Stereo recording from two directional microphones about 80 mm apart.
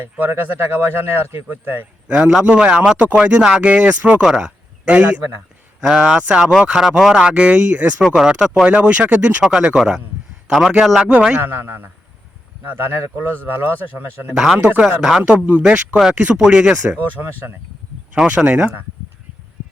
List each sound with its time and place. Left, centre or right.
0.0 s speech: right
2.0 s speech: centre
8.0 s a man's voice: centre
8.6 s a man's voice: centre
11.3 s speech: right
14.3 s a man's voice: centre
18.1 s speech: centre